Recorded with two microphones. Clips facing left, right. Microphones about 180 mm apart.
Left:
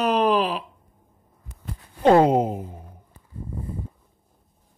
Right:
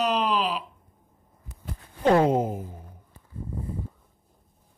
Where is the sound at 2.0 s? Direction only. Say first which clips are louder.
Left 4 dB; 20° left (ahead or behind).